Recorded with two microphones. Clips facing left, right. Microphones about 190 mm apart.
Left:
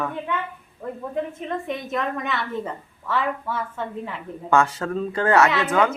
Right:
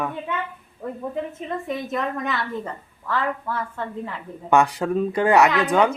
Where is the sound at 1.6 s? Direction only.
Centre (ahead or behind).